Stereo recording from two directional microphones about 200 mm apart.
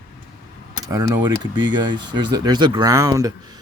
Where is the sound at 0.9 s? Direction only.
15° right (ahead or behind).